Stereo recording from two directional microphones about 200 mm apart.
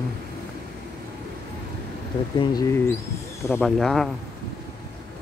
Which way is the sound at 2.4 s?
20° left (ahead or behind).